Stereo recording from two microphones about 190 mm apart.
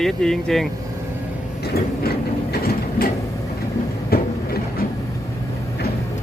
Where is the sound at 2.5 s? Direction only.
55° left (ahead or behind).